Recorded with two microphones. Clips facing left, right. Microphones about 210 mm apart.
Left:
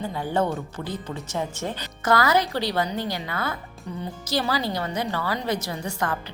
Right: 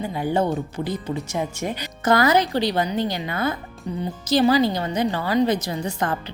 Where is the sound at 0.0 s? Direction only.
15° right (ahead or behind).